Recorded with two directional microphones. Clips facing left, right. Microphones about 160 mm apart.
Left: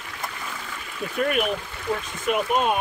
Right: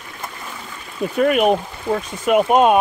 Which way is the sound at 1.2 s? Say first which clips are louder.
Right 8 dB; 90° right.